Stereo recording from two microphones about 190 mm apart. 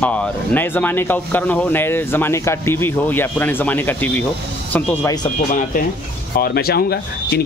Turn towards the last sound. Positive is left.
turn(degrees=55)  # may be behind; listen again after turning